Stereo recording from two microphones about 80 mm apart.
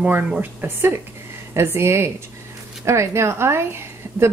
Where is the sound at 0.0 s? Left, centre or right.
Centre.